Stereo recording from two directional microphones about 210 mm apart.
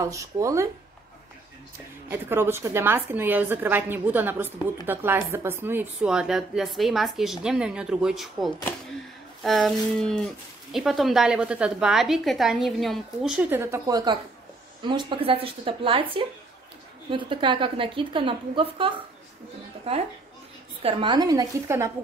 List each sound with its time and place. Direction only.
0.0 s a woman's voice: 15° right (ahead or behind)
2.0 s a woman's voice: 10° right (ahead or behind)